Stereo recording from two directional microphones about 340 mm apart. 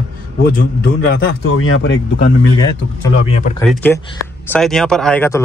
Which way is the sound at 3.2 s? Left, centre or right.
Centre.